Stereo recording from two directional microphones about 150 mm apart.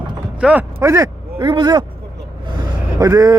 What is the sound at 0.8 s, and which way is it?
Speech, 20° right (ahead or behind).